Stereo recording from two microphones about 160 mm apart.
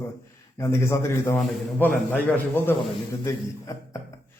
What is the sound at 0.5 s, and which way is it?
A man's voice, 15° left (ahead or behind).